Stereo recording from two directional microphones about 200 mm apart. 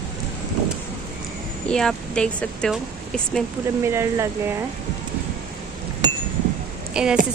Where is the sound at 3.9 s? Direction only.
15° right (ahead or behind).